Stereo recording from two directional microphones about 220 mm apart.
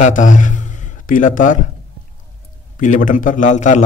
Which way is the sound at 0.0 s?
35° left (ahead or behind).